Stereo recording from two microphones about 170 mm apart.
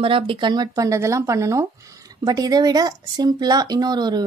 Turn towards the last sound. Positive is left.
turn(degrees=-25)  # may be behind; listen again after turning